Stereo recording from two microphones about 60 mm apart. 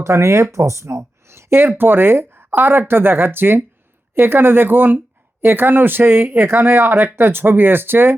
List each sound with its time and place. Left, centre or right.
0.0 s speech: right